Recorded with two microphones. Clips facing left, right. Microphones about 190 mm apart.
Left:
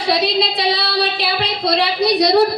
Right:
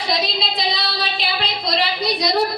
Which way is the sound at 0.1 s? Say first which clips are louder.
Left 7 dB; 65° left (ahead or behind).